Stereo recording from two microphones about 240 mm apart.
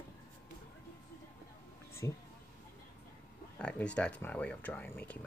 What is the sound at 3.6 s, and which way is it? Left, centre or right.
Speech, centre.